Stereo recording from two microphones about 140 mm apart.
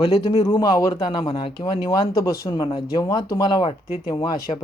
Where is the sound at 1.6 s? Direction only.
25° left (ahead or behind).